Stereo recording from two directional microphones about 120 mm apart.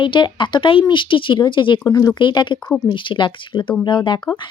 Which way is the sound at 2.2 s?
40° left (ahead or behind).